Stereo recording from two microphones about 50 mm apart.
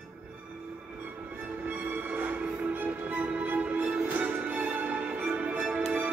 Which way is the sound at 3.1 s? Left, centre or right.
Right.